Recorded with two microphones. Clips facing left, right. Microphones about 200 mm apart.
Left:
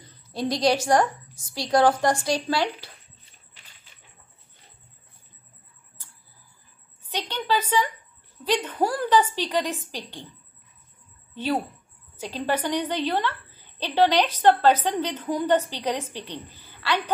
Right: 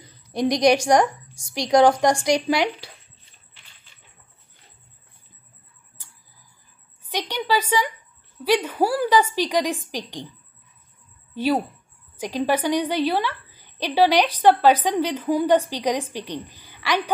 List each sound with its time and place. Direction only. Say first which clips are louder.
0.0 s a sound: right 5 dB; 15° right (ahead or behind)
1.5 s a woman's voice: right 4 dB; 15° right (ahead or behind)
7.1 s a woman's voice: right 2 dB; 10° right (ahead or behind)
12.2 s a woman's voice: right 4 dB; 15° right (ahead or behind)